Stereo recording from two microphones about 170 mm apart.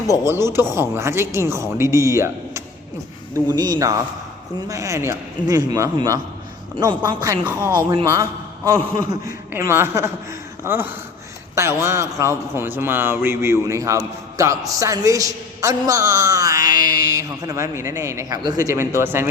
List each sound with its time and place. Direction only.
0.3 s a man's voice: 15° right (ahead or behind)